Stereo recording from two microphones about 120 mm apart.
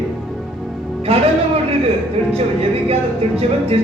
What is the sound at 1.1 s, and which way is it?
Speech, 55° right (ahead or behind).